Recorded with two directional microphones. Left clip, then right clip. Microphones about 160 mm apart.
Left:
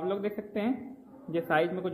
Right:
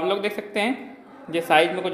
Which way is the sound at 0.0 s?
15° right (ahead or behind).